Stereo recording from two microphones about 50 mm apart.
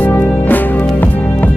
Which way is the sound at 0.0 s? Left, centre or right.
Left.